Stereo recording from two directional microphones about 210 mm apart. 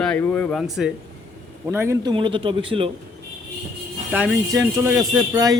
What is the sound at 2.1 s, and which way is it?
Speech, 25° right (ahead or behind).